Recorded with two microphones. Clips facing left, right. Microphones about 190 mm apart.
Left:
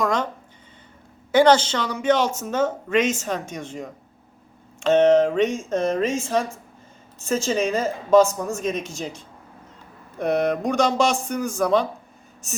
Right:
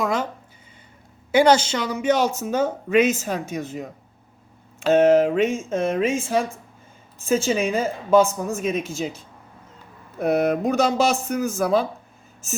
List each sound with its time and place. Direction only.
0.0 s a sound: 5° right (ahead or behind)
1.3 s a woman's voice: 10° right (ahead or behind)
7.4 s a woman's voice: 5° right (ahead or behind)